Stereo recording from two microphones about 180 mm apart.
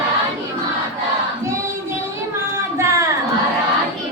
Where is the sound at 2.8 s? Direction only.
15° right (ahead or behind).